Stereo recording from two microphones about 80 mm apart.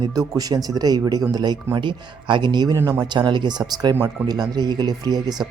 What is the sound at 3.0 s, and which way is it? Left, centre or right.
Speech, right.